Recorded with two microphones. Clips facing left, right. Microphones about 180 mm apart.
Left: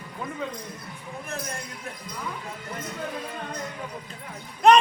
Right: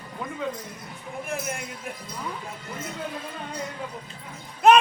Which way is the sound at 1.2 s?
15° right (ahead or behind).